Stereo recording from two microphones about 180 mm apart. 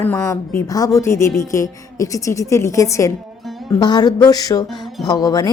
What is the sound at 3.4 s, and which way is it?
Music, centre (ahead or behind).